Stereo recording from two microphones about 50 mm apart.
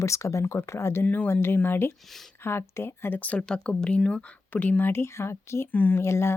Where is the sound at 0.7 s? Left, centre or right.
Left.